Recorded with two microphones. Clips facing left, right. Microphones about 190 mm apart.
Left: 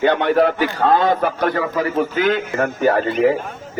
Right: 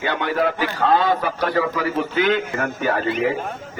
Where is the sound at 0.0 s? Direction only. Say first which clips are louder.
Left 6 dB; 55° left (ahead or behind).